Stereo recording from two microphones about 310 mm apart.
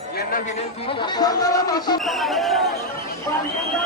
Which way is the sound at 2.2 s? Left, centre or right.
Centre.